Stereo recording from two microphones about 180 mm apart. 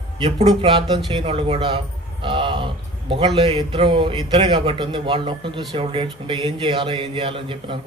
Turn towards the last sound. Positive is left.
turn(degrees=-30)  # may be behind; listen again after turning